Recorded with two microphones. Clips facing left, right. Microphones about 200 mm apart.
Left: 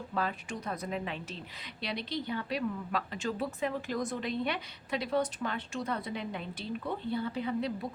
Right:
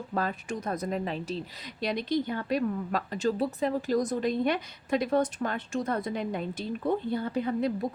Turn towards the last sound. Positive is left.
turn(degrees=-45)  # may be behind; listen again after turning